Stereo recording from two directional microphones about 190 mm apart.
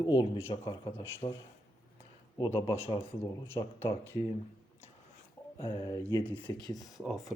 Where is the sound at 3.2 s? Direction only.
15° left (ahead or behind).